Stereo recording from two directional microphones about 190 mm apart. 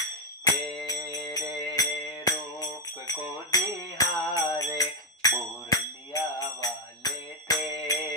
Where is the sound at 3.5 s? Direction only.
20° left (ahead or behind).